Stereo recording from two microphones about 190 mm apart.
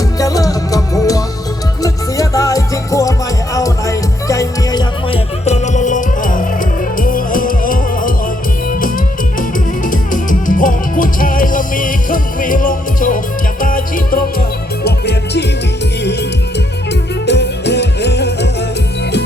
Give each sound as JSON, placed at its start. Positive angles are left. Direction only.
{"t": 0.2, "sound": "music", "side_deg": 20}
{"t": 5.5, "sound": "music", "side_deg": 40}
{"t": 9.8, "sound": "music", "side_deg": 45}
{"t": 14.8, "sound": "music", "side_deg": 60}
{"t": 17.2, "sound": "music", "side_deg": 65}